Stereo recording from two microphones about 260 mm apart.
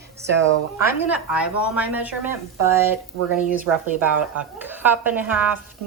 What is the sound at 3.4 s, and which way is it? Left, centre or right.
A woman's voice, centre.